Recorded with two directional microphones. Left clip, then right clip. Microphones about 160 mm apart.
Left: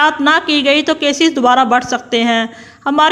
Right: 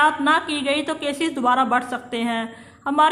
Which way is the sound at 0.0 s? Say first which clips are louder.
Left 6 dB; 35° left (ahead or behind).